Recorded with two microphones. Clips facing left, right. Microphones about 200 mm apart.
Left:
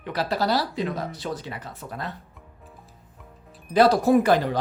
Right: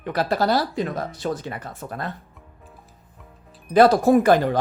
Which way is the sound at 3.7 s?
50° right (ahead or behind).